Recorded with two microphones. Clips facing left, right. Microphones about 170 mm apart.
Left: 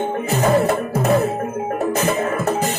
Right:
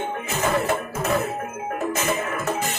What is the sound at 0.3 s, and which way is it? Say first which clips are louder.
Music: left 6 dB; 35° left (ahead or behind).